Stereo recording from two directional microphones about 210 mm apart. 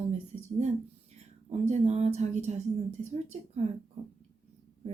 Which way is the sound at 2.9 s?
35° right (ahead or behind).